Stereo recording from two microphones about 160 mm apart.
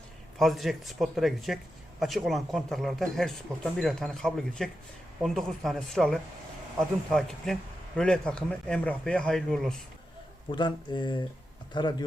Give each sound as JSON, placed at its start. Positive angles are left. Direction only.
{"t": 0.3, "sound": "a man's voice", "side_deg": 0}
{"t": 10.5, "sound": "speech", "side_deg": 30}